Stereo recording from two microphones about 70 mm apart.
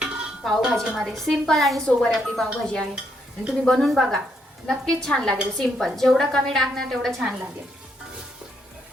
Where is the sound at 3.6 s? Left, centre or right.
Centre.